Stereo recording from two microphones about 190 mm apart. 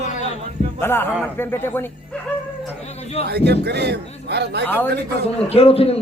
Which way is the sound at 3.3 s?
60° right (ahead or behind).